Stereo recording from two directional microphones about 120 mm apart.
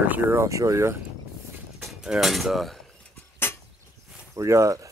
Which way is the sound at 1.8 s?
5° right (ahead or behind).